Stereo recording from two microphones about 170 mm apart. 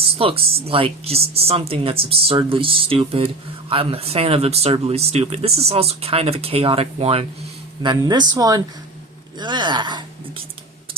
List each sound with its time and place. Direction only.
0.2 s speech: 35° right (ahead or behind)